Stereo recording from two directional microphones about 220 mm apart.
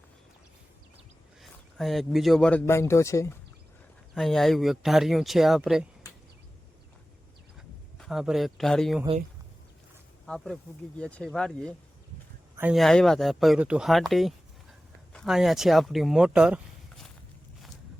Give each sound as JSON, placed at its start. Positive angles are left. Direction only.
{"t": 1.4, "sound": "speech", "side_deg": 0}
{"t": 4.1, "sound": "speech", "side_deg": 0}
{"t": 7.9, "sound": "speech", "side_deg": 0}
{"t": 10.2, "sound": "speech", "side_deg": 0}